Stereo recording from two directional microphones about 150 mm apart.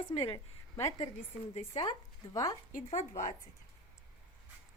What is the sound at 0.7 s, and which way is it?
Speech, 20° left (ahead or behind).